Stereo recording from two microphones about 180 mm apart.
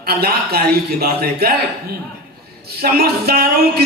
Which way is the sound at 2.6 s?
60° right (ahead or behind).